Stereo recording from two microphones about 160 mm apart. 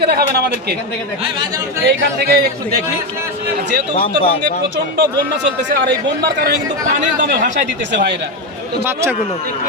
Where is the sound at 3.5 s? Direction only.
90° right.